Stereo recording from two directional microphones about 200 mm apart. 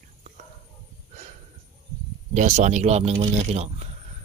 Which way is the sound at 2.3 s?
35° right (ahead or behind).